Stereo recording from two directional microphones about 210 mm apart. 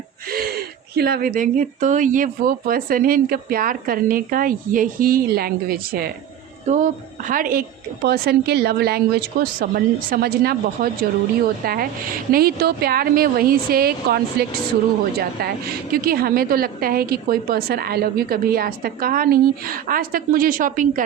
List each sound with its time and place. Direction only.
0.3 s a woman's voice: 45° right (ahead or behind)